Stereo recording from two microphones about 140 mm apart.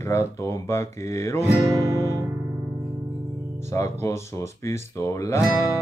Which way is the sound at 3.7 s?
20° left (ahead or behind).